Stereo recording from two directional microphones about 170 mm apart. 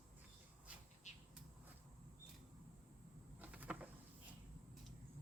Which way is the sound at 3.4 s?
10° right (ahead or behind).